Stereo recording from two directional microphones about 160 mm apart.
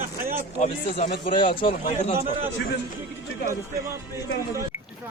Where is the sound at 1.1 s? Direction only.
30° left (ahead or behind).